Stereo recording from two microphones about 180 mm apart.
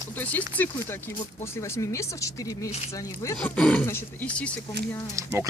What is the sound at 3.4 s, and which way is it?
Speech, 5° left (ahead or behind).